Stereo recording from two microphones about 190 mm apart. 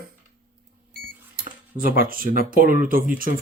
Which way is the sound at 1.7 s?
50° right (ahead or behind).